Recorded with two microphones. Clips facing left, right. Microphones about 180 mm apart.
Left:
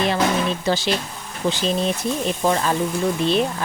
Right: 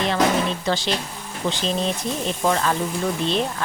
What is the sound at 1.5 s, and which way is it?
Speech, 10° left (ahead or behind).